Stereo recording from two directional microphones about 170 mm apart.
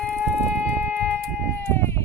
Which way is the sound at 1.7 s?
15° left (ahead or behind).